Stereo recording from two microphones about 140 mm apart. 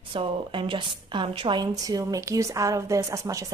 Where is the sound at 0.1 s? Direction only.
40° right (ahead or behind).